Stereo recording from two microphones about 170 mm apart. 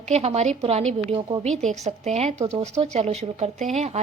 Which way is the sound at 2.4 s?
20° right (ahead or behind).